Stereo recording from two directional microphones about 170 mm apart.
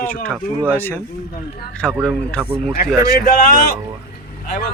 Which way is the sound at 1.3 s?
70° left (ahead or behind).